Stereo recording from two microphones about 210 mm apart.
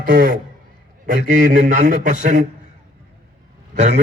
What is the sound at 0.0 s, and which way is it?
A man's voice, 40° right (ahead or behind).